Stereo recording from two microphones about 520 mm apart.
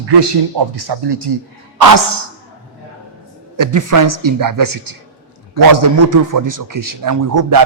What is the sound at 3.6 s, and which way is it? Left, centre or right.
A man's voice, right.